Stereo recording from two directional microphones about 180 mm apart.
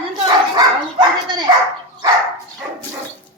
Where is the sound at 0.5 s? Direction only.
25° right (ahead or behind).